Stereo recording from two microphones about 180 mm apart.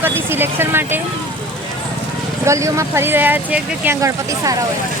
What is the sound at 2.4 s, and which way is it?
Speech, 15° right (ahead or behind).